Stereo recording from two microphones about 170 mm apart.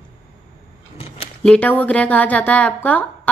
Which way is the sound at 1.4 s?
5° left (ahead or behind).